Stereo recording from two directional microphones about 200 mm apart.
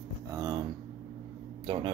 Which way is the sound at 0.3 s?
20° right (ahead or behind).